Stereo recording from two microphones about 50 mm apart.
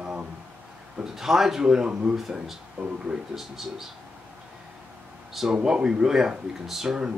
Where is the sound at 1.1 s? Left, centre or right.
Centre.